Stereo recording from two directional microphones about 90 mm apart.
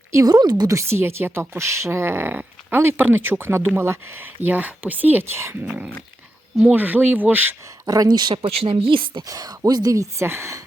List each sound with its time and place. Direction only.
0.1 s speech: 35° right (ahead or behind)
0.3 s speech: 50° right (ahead or behind)
0.8 s speech: 30° right (ahead or behind)
5.6 s dog: 15° right (ahead or behind)
6.7 s speech: 20° right (ahead or behind)
7.9 s speech: 45° right (ahead or behind)
8.4 s speech: 85° right
9.2 s speech: 45° right (ahead or behind)